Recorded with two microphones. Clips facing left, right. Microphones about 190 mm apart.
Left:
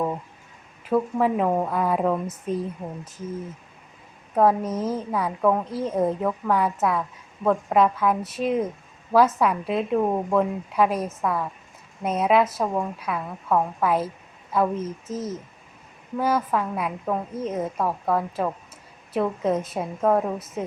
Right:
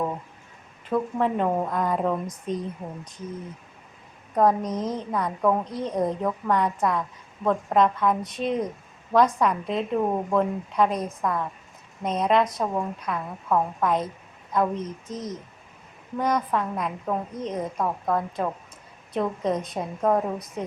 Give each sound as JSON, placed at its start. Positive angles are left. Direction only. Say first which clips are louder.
{"t": 0.9, "sound": "a woman's voice", "louder": "left 3 dB", "side_deg": 5}
{"t": 4.4, "sound": "a woman's voice", "louder": "left 1 dB", "side_deg": 5}